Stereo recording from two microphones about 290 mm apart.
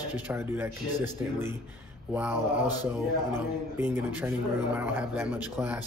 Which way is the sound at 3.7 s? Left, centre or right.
Centre.